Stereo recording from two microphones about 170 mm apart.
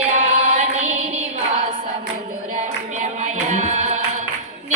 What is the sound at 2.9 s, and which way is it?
Music, 40° right (ahead or behind).